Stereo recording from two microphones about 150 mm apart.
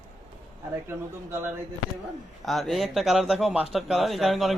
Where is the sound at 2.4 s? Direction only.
Centre (ahead or behind).